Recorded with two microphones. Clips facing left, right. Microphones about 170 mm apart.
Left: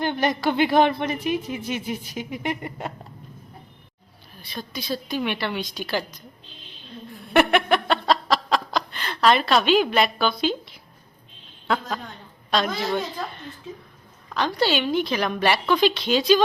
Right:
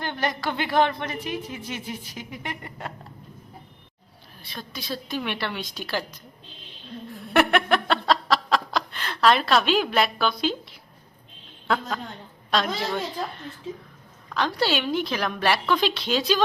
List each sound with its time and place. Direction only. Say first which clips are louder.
0.0 s a woman's voice: left 5 dB; 15° left (ahead or behind)
4.4 s a woman's voice: left 4 dB; centre (ahead or behind)
7.3 s laughter: left 2 dB; centre (ahead or behind)
12.5 s a woman's voice: left 2 dB; centre (ahead or behind)
14.3 s a woman's voice: left 2 dB; centre (ahead or behind)